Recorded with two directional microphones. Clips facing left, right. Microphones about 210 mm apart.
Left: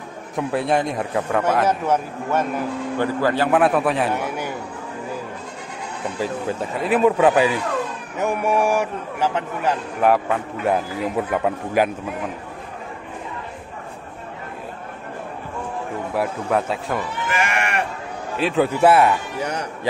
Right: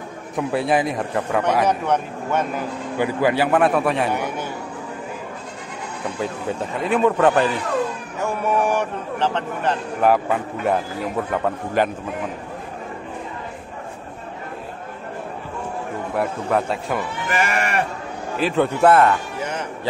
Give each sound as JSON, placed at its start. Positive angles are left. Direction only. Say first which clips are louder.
{"t": 0.4, "sound": "a man's voice", "louder": "right 1 dB", "side_deg": 0}
{"t": 3.0, "sound": "a man's voice", "louder": "right 2 dB", "side_deg": -10}
{"t": 3.5, "sound": "a man's voice", "louder": "even", "side_deg": 0}
{"t": 6.1, "sound": "a man's voice", "louder": "left 1 dB", "side_deg": 0}
{"t": 16.2, "sound": "a man's voice", "louder": "even", "side_deg": 0}
{"t": 17.3, "sound": "sheep", "louder": "right 2 dB", "side_deg": -35}
{"t": 18.4, "sound": "a man's voice", "louder": "even", "side_deg": 0}
{"t": 19.4, "sound": "a man's voice", "louder": "left 1 dB", "side_deg": 40}